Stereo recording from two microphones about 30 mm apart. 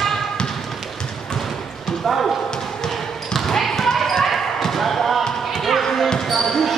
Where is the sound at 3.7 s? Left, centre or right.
Centre.